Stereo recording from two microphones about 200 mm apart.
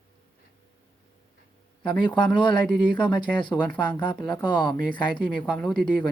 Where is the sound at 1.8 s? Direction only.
25° left (ahead or behind).